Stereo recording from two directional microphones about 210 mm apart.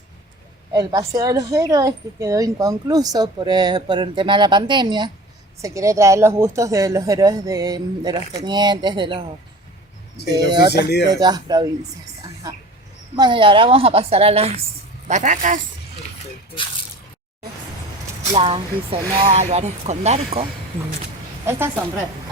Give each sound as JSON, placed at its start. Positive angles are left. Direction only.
{"t": 0.7, "sound": "a woman's voice", "side_deg": -15}
{"t": 10.2, "sound": "speech", "side_deg": -20}
{"t": 13.1, "sound": "speech", "side_deg": -20}
{"t": 18.3, "sound": "speech", "side_deg": -25}